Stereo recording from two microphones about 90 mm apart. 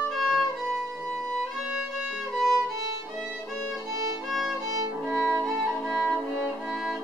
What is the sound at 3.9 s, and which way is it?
Music, 40° right (ahead or behind).